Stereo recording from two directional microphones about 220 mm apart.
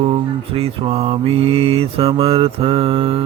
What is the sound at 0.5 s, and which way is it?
Mantra, 25° right (ahead or behind).